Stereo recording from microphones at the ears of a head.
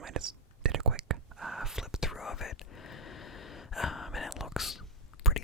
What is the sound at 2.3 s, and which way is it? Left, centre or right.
Whispering, left.